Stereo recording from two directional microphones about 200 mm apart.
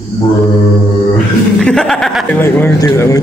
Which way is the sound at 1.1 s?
5° left (ahead or behind).